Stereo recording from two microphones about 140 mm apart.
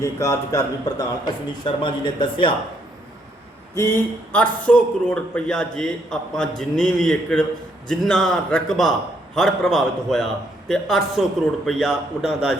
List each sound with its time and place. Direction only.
0.0 s a man's voice: 25° left (ahead or behind)
3.8 s a man's voice: 15° left (ahead or behind); by 12.5 s 5° right (ahead or behind)